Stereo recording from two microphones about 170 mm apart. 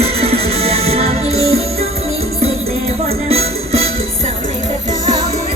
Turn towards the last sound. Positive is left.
turn(degrees=-35)  # may be behind; listen again after turning